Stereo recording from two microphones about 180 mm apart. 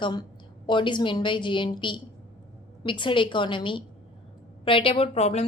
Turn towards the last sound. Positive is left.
turn(degrees=35)  # may be behind; listen again after turning